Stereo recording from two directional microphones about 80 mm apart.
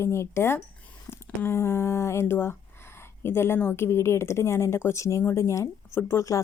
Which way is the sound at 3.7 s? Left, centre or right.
Left.